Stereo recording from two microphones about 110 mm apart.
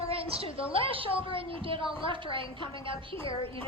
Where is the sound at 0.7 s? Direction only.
55° right (ahead or behind).